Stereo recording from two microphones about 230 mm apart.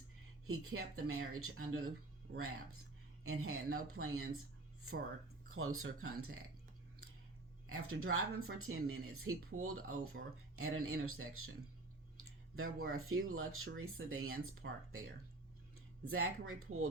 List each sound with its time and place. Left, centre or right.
0.4 s speech: right
5.5 s speech: right
7.7 s speech: right
12.5 s speech: right
14.6 s speech: right
16.0 s speech: right